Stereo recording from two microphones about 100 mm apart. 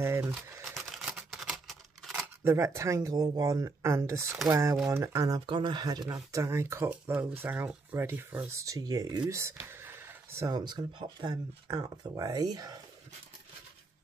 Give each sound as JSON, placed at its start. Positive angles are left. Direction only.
{"t": 0.0, "sound": "speech", "side_deg": -25}
{"t": 0.7, "sound": "typewriter", "side_deg": -5}
{"t": 1.3, "sound": "scissors", "side_deg": 0}
{"t": 2.4, "sound": "speech", "side_deg": -30}
{"t": 5.5, "sound": "speech", "side_deg": -50}
{"t": 8.5, "sound": "speech", "side_deg": -35}
{"t": 9.3, "sound": "a sound", "side_deg": -30}
{"t": 10.5, "sound": "speech", "side_deg": -45}